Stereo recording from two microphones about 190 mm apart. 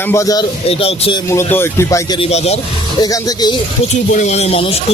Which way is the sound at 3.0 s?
20° left (ahead or behind).